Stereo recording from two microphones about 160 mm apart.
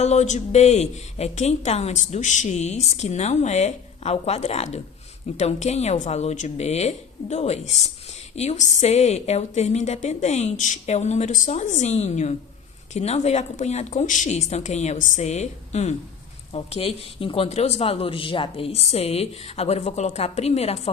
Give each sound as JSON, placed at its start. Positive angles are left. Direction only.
{"t": 0.0, "sound": "a woman's voice", "side_deg": 45}